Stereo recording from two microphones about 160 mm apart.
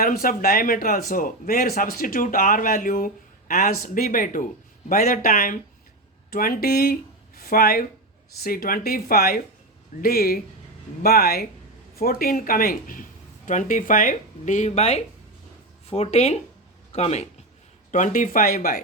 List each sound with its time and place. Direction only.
0.0 s speech: 65° left (ahead or behind); by 17.2 s 40° left (ahead or behind)
17.9 s speech: 55° left (ahead or behind)